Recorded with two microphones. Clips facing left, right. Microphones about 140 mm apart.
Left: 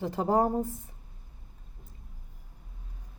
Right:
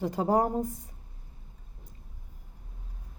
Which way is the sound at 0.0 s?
15° right (ahead or behind).